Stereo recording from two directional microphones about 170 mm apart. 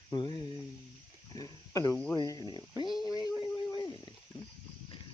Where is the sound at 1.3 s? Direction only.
20° left (ahead or behind).